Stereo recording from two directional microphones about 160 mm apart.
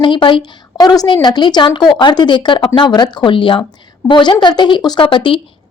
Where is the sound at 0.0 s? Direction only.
30° left (ahead or behind).